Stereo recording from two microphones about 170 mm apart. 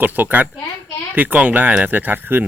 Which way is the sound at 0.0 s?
10° right (ahead or behind).